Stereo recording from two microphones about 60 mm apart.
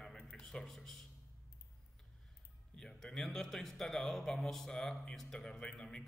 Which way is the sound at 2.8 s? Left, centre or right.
Centre.